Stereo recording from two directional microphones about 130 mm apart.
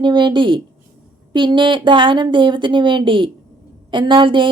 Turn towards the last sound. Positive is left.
turn(degrees=-40)  # may be behind; listen again after turning